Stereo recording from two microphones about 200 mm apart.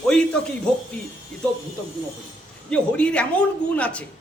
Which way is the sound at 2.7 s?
5° left (ahead or behind).